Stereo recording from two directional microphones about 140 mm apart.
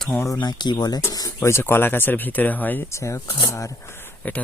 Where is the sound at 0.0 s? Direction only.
5° left (ahead or behind).